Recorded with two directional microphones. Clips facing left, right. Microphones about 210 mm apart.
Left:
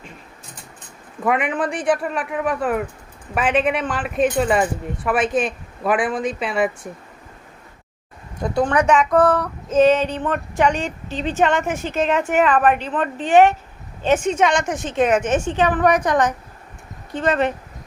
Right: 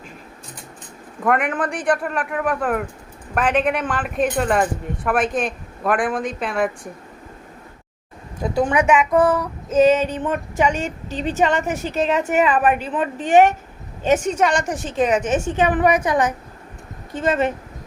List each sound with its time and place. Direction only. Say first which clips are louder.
1.2 s speech: even; centre (ahead or behind)
8.4 s a woman's voice: even; 5° right (ahead or behind)
11.1 s a woman's voice: even; 45° right (ahead or behind)
11.3 s speech: left 1 dB; 5° right (ahead or behind)
11.7 s a woman's voice: even; 40° right (ahead or behind)
12.0 s a woman's voice: even; 5° right (ahead or behind)
13.1 s a woman's voice: even; 45° right (ahead or behind)
14.8 s speech: left 1 dB; centre (ahead or behind)
15.5 s a woman's voice: right 1 dB; 10° right (ahead or behind)